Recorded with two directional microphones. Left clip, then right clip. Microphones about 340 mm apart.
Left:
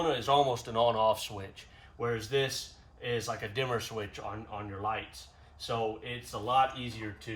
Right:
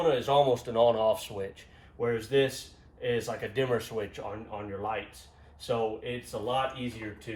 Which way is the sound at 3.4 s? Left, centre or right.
Centre.